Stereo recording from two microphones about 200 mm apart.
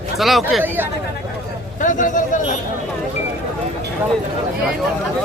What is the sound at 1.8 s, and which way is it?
Speech, 40° left (ahead or behind).